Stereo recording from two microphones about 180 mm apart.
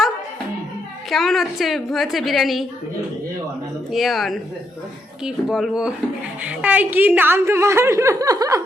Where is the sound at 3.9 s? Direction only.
Centre (ahead or behind).